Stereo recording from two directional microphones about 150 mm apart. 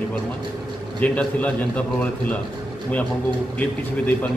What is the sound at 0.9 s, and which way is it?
Speech, 10° left (ahead or behind).